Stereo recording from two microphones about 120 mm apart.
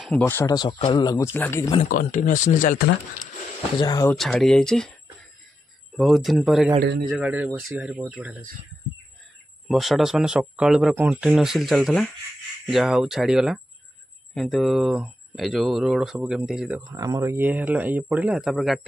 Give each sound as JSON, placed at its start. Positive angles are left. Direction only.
{"t": 0.2, "sound": "speech", "side_deg": 20}
{"t": 0.7, "sound": "speech", "side_deg": 55}
{"t": 0.9, "sound": "speech", "side_deg": 35}
{"t": 1.3, "sound": "speech", "side_deg": 15}
{"t": 1.8, "sound": "speech", "side_deg": 90}
{"t": 3.8, "sound": "speech", "side_deg": 30}
{"t": 4.2, "sound": "speech", "side_deg": 5}
{"t": 5.9, "sound": "speech", "side_deg": 0}
{"t": 9.7, "sound": "speech", "side_deg": 0}
{"t": 16.8, "sound": "speech", "side_deg": -30}
{"t": 17.5, "sound": "speech", "side_deg": -15}